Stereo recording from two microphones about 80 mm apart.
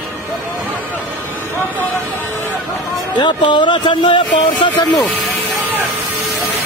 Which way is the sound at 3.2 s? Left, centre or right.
Left.